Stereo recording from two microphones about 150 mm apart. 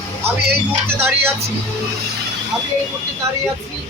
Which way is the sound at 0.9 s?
15° right (ahead or behind).